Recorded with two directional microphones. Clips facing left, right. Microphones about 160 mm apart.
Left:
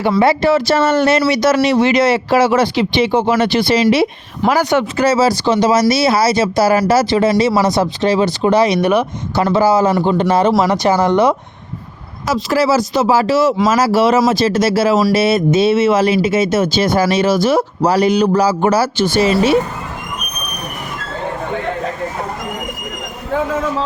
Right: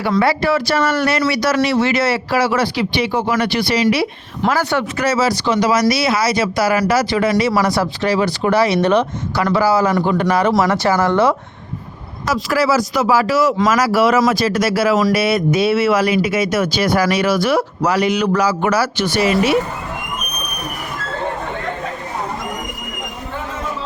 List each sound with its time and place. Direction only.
0.2 s speech: 25° left (ahead or behind)
4.9 s speech: 30° left (ahead or behind); by 9.0 s 10° left (ahead or behind)
9.3 s speech: 25° left (ahead or behind)